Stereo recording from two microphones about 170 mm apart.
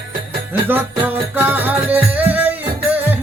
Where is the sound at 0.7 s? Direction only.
10° right (ahead or behind).